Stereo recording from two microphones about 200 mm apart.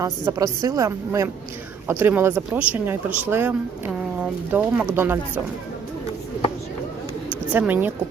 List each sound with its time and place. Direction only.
0.0 s speech: 15° right (ahead or behind)
7.5 s speech: 5° right (ahead or behind)